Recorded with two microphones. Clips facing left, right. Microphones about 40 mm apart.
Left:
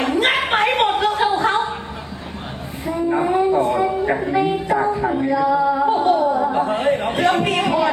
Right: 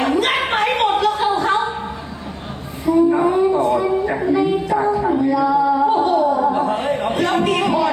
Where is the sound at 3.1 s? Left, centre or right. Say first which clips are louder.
Right 2 dB; left.